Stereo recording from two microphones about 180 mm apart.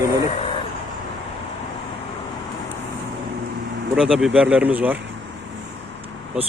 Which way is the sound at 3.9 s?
5° right (ahead or behind).